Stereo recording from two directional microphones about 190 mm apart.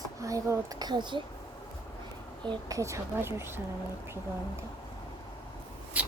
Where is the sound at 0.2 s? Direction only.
15° right (ahead or behind).